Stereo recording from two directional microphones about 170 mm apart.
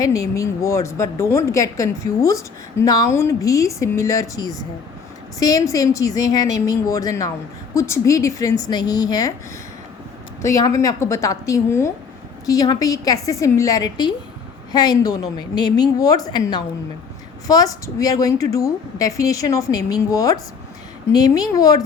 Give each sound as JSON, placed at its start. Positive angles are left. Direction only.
{"t": 0.0, "sound": "a woman's voice", "side_deg": 20}
{"t": 10.4, "sound": "a woman's voice", "side_deg": 20}